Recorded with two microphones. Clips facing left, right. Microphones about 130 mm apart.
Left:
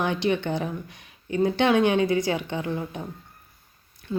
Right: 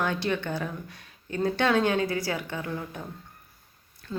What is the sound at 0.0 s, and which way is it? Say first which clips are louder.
Speech: left 4 dB; 20° left (ahead or behind).